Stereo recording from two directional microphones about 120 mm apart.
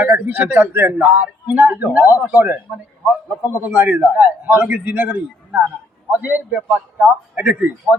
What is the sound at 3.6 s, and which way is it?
A man's voice, 15° right (ahead or behind).